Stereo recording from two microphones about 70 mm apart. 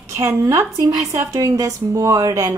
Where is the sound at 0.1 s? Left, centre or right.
Right.